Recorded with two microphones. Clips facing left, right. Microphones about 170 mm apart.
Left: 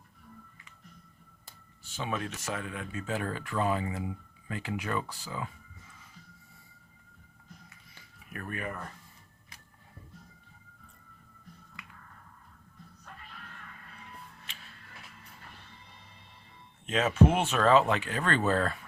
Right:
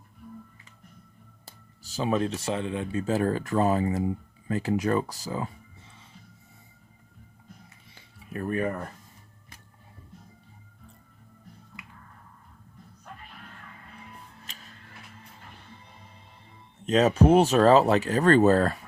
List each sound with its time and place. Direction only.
1.5 s speech: 35° right (ahead or behind)
8.3 s speech: 30° right (ahead or behind)
14.4 s music: 40° right (ahead or behind)
16.8 s speech: 40° right (ahead or behind)